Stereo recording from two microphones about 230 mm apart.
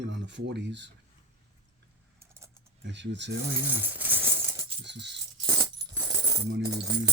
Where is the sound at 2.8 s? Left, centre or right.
Right.